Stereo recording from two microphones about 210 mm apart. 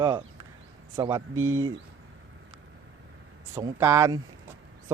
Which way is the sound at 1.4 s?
75° right (ahead or behind).